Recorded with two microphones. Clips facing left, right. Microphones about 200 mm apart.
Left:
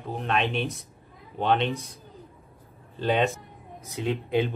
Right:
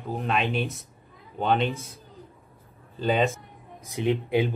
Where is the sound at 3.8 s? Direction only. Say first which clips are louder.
Right 4 dB; 15° right (ahead or behind).